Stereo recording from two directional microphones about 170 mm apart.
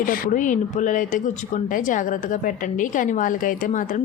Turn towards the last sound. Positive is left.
turn(degrees=50)  # may be behind; listen again after turning